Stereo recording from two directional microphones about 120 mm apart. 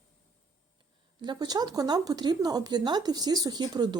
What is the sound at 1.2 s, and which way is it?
A woman's voice, 35° right (ahead or behind).